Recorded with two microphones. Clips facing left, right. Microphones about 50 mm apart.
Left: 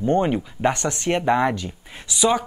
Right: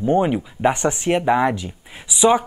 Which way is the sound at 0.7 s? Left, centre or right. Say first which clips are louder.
Right 3 dB; centre.